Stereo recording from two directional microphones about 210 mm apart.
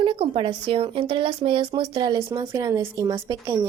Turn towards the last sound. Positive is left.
turn(degrees=-15)  # may be behind; listen again after turning